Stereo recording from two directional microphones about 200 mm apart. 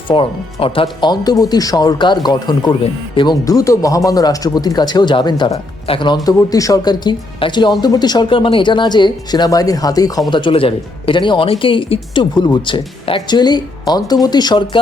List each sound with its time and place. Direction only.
0.1 s speech: 25° left (ahead or behind)